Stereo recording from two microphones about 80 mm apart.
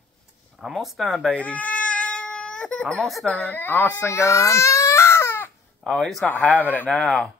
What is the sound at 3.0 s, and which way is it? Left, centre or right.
Speech, centre.